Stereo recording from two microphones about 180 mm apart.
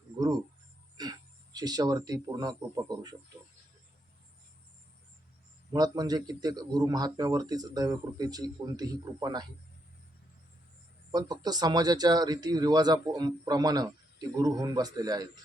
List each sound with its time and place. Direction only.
1.5 s a man's voice: 20° right (ahead or behind)
5.7 s a man's voice: 20° right (ahead or behind)
11.1 s a man's voice: 20° right (ahead or behind)